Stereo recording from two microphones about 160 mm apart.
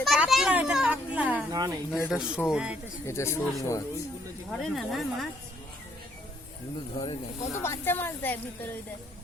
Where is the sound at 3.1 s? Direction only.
15° left (ahead or behind).